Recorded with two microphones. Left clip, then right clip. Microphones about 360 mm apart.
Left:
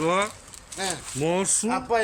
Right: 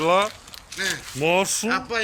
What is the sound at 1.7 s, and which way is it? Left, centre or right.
Speech, centre.